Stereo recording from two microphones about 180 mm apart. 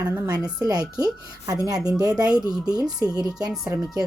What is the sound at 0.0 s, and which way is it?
A woman's voice, 20° right (ahead or behind).